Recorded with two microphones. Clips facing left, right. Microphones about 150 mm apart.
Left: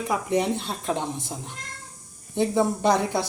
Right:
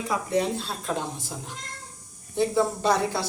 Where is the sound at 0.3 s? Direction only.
20° left (ahead or behind).